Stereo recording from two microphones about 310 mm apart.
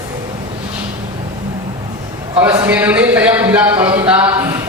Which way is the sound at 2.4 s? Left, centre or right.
Centre.